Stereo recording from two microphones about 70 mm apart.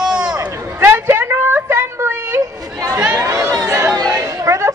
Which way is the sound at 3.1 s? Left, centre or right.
Right.